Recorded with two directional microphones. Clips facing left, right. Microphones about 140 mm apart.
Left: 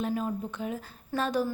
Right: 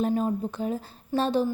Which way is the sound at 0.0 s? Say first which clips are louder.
Right 5 dB; 35° right (ahead or behind).